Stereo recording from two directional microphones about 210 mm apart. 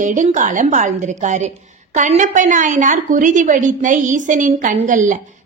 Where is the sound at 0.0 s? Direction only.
35° right (ahead or behind).